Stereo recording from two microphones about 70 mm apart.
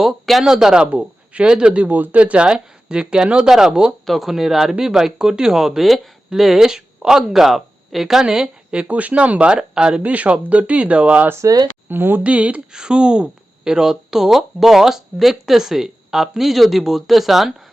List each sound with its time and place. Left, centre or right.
0.0 s speech: centre
11.4 s speech: right
11.9 s speech: right
12.2 s speech: centre